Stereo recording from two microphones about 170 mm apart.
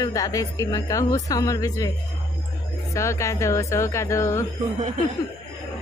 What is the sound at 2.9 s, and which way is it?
A woman's voice, 20° left (ahead or behind).